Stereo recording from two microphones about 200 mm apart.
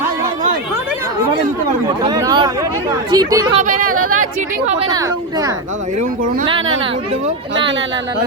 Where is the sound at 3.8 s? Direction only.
90° right.